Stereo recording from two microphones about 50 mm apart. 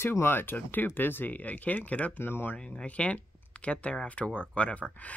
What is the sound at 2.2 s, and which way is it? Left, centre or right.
Speech, left.